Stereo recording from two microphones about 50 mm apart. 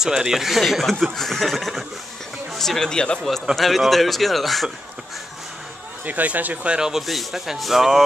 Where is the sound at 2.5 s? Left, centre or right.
Centre.